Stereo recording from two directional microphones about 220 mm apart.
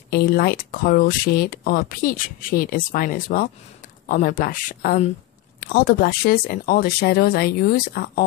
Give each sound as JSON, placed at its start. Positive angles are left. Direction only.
{"t": 0.1, "sound": "speech", "side_deg": 45}